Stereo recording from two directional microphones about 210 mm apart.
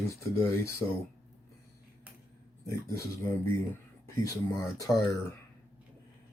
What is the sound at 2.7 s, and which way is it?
Speech, 15° left (ahead or behind).